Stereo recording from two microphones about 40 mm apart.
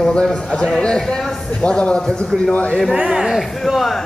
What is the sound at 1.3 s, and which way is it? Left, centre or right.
Speech, centre.